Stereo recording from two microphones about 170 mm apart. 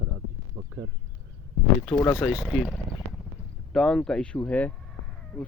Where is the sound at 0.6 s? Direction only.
15° right (ahead or behind).